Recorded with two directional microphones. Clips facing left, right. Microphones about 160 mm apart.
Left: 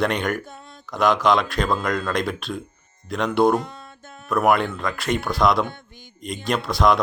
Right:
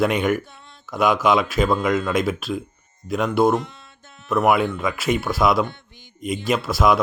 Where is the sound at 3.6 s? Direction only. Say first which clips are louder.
Left 2 dB; 50° left (ahead or behind).